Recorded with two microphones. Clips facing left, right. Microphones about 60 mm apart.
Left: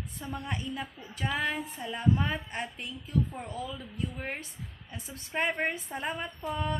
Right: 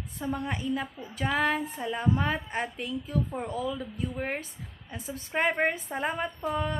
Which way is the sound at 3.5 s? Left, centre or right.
Right.